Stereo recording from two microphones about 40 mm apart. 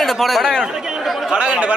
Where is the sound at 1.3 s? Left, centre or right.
Right.